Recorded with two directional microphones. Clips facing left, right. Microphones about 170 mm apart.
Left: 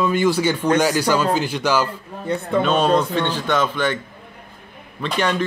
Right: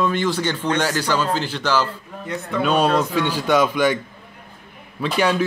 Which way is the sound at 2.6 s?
5° right (ahead or behind).